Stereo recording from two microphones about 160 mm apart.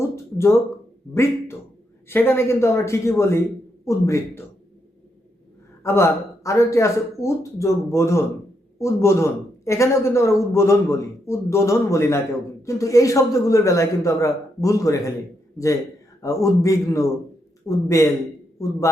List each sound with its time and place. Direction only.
0.0 s a sound: 15° left (ahead or behind)
1.1 s a man's voice: 15° left (ahead or behind)
5.8 s a man's voice: 15° left (ahead or behind)